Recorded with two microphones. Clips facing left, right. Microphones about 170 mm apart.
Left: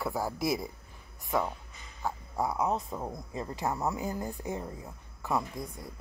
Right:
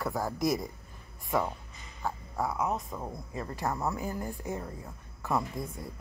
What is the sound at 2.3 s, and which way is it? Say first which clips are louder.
Speech: left 2 dB; 15° left (ahead or behind).